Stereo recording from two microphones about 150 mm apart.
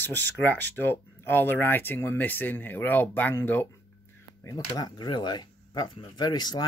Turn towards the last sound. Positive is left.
turn(degrees=25)  # may be behind; listen again after turning